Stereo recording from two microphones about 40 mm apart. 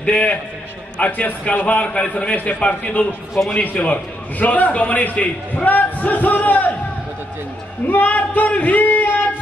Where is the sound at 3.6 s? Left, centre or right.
Left.